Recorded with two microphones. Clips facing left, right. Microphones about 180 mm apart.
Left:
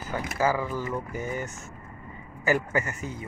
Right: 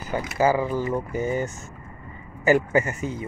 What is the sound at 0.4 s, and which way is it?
A man's voice, 20° right (ahead or behind).